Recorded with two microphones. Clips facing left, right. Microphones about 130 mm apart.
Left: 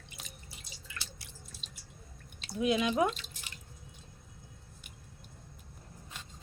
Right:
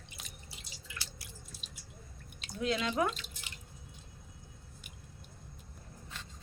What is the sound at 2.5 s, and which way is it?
Speech, 15° left (ahead or behind).